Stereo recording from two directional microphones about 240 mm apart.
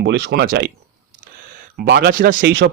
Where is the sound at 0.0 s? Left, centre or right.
Right.